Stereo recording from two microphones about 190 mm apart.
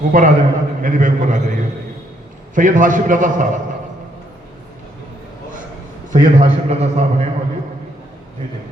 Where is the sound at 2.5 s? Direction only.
45° right (ahead or behind).